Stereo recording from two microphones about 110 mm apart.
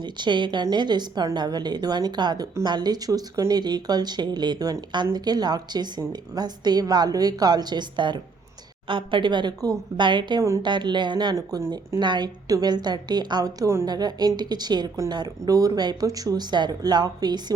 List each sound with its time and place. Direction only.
0.0 s a woman's voice: 45° right (ahead or behind)
11.3 s speech: 35° right (ahead or behind)
11.9 s a woman's voice: 40° right (ahead or behind)